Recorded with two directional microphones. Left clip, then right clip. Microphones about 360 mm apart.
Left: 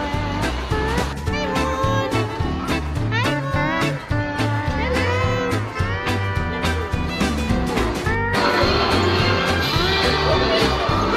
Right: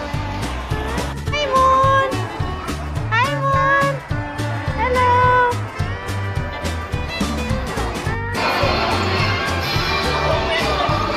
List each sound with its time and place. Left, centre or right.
1.3 s music: centre